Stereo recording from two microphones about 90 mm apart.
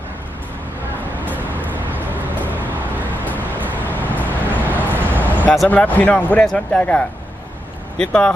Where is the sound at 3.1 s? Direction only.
20° left (ahead or behind).